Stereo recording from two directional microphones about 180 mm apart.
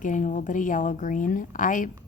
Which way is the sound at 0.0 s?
45° left (ahead or behind).